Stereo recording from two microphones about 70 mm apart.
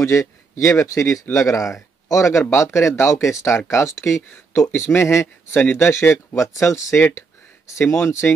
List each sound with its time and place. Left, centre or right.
0.0 s speech: left
6.1 s speech: left
7.0 s a sound: left
8.0 s speech: left